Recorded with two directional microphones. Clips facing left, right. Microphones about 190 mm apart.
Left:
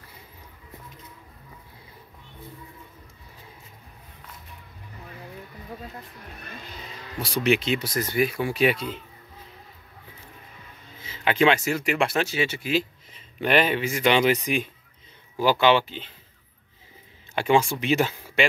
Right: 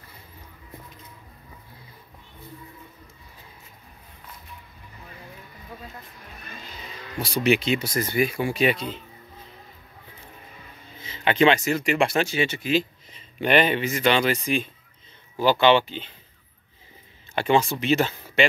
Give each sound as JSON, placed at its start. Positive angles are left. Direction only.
{"t": 7.2, "sound": "speech", "side_deg": 0}
{"t": 11.0, "sound": "speech", "side_deg": 5}
{"t": 17.4, "sound": "speech", "side_deg": 10}